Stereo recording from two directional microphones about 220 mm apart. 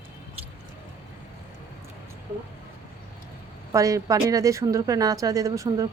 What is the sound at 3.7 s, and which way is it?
Speech, 15° right (ahead or behind).